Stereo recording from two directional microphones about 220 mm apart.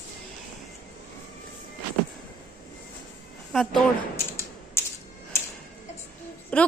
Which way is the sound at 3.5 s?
Centre (ahead or behind).